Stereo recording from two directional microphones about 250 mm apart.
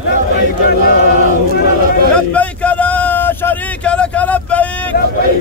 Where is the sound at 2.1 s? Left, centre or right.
Centre.